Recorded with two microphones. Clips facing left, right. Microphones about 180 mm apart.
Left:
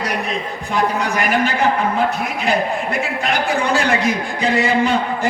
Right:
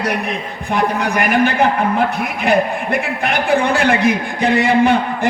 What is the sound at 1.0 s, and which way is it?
Speech, 60° right (ahead or behind).